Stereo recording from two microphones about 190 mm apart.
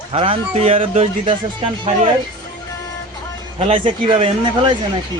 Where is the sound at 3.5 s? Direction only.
30° right (ahead or behind).